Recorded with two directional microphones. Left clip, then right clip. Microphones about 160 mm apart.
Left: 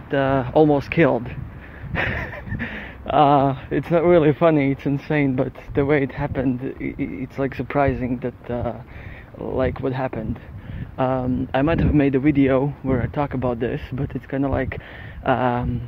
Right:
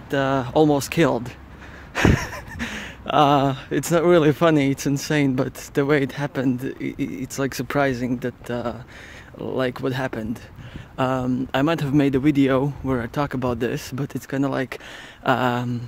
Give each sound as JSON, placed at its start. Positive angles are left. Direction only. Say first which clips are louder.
{"t": 0.1, "sound": "speech", "louder": "left 2 dB", "side_deg": -20}